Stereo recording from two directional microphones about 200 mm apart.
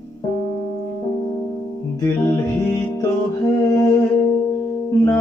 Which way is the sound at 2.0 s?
20° left (ahead or behind).